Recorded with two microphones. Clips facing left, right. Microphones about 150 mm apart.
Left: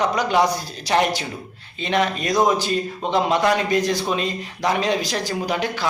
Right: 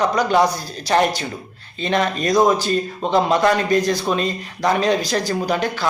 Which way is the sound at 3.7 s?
45° right (ahead or behind).